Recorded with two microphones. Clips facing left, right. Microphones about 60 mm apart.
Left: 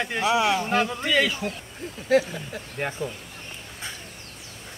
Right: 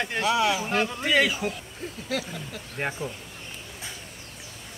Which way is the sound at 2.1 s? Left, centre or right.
Left.